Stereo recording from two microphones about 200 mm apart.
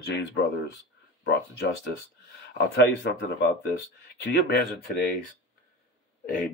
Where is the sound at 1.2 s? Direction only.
55° left (ahead or behind).